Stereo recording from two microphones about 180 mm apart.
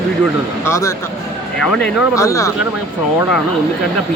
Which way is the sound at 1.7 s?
5° left (ahead or behind).